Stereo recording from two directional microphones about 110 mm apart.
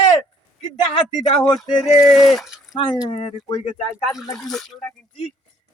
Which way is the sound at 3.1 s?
60° left (ahead or behind).